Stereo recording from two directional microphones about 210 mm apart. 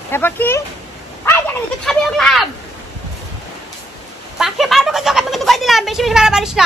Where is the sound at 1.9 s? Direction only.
Centre (ahead or behind).